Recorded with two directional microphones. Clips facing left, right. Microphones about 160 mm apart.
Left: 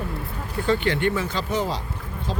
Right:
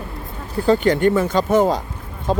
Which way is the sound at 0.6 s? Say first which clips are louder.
Right 7 dB; 40° right (ahead or behind).